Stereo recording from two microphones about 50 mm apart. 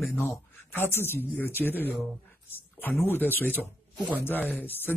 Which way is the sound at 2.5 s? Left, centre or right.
Left.